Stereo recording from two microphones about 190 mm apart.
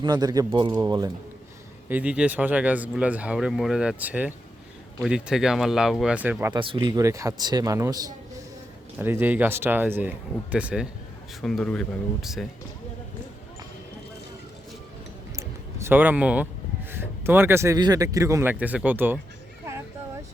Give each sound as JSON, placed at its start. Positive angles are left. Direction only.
{"t": 0.0, "sound": "a man's voice", "side_deg": -20}
{"t": 1.9, "sound": "speech", "side_deg": -5}
{"t": 6.5, "sound": "a man's voice", "side_deg": -25}
{"t": 11.4, "sound": "speech", "side_deg": 5}
{"t": 15.4, "sound": "a sound", "side_deg": -10}
{"t": 16.9, "sound": "speech", "side_deg": -10}